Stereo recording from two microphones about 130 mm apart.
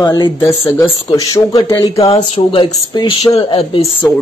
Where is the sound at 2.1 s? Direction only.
40° left (ahead or behind).